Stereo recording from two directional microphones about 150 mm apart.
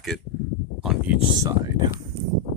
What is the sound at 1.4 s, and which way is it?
Speech, 25° right (ahead or behind).